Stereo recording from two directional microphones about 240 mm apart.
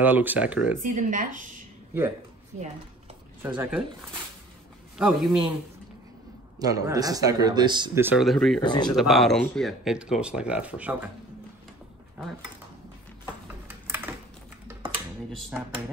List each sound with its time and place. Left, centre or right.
0.0 s speech: centre
0.8 s speech: right
3.4 s speech: centre
4.9 s speech: centre
6.6 s speech: centre
8.5 s speech: centre
8.8 s speech: centre
13.2 s a sound: centre